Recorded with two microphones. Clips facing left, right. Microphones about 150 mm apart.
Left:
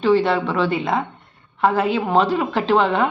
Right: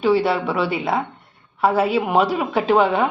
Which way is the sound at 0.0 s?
10° right (ahead or behind).